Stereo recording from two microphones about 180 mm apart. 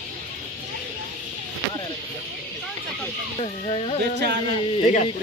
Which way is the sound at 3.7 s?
35° left (ahead or behind).